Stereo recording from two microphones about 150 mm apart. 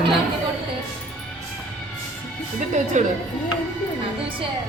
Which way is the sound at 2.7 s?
55° right (ahead or behind).